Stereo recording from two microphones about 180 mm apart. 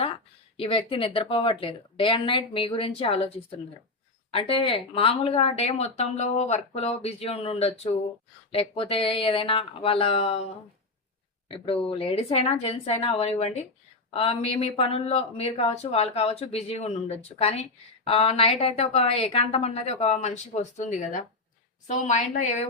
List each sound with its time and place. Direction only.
0.5 s speech: 30° left (ahead or behind)